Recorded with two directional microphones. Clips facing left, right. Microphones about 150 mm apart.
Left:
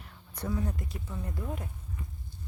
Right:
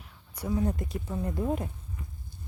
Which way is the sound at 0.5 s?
30° right (ahead or behind).